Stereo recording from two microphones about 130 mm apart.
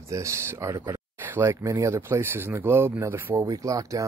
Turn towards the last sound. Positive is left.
turn(degrees=-25)  # may be behind; listen again after turning